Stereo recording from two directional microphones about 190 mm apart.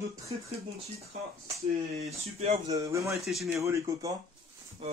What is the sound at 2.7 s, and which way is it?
Speech, 15° right (ahead or behind).